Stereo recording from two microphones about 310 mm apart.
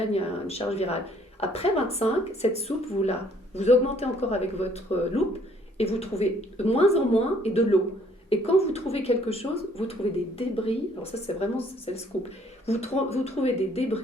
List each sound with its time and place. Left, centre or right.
0.1 s speech: centre
12.6 s speech: centre